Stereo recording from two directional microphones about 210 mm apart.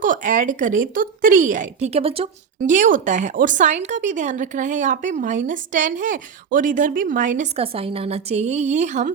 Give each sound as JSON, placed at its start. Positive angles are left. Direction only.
{"t": 0.0, "sound": "speech", "side_deg": -40}
{"t": 2.6, "sound": "speech", "side_deg": -40}